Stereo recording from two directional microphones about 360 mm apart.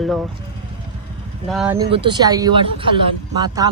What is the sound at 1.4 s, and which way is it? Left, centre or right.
Speech, centre.